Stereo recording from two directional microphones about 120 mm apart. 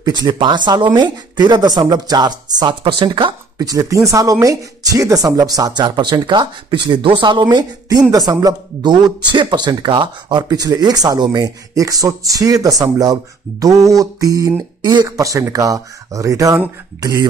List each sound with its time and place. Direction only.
0.0 s speech: 35° right (ahead or behind)
3.5 s speech: 30° right (ahead or behind)